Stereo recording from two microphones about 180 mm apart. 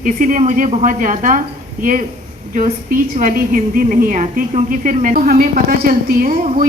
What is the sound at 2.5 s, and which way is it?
A woman's voice, 45° right (ahead or behind).